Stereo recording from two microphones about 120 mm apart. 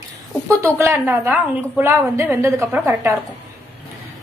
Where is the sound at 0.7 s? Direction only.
20° right (ahead or behind).